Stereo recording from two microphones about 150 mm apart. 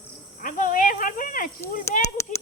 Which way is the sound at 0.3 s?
65° left (ahead or behind).